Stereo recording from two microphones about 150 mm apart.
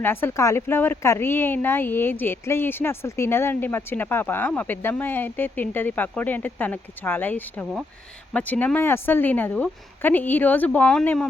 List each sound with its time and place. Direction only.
0.0 s speech: 15° left (ahead or behind)